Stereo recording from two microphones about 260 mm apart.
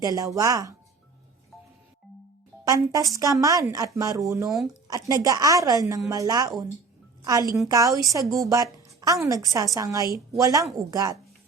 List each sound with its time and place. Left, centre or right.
0.0 s a woman's voice: centre
2.6 s a woman's voice: centre
4.4 s speech: centre
4.9 s a woman's voice: centre